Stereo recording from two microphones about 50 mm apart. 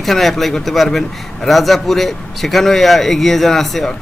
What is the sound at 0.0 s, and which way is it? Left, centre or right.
Speech, centre.